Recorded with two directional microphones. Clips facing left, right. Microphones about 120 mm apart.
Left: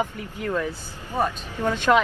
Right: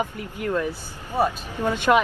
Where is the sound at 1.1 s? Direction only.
10° right (ahead or behind).